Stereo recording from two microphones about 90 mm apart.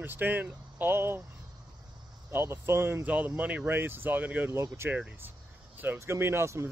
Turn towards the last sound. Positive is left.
turn(degrees=-30)  # may be behind; listen again after turning